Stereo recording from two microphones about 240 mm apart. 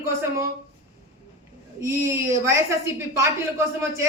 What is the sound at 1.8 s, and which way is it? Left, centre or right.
A woman's voice, centre.